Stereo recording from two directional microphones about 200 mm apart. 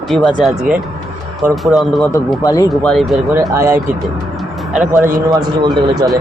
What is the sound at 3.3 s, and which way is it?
Speech, 15° right (ahead or behind).